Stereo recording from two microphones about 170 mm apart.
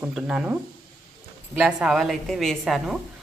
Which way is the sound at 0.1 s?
5° right (ahead or behind).